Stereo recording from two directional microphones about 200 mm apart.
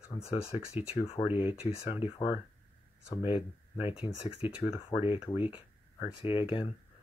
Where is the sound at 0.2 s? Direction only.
30° left (ahead or behind).